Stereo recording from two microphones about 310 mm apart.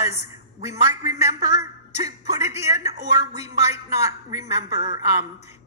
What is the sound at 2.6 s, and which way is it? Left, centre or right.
A woman's voice, centre.